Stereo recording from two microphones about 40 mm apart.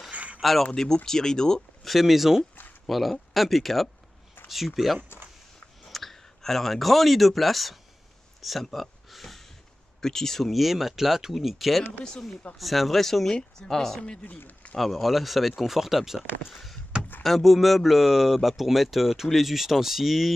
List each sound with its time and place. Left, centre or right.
0.1 s a sound: right
0.4 s speech: centre
1.0 s speech: centre
1.9 s speech: centre
8.6 s a sound: centre
10.0 s speech: centre
10.5 s speech: centre
13.3 s speech: centre
16.4 s a sound: centre
17.2 s speech: centre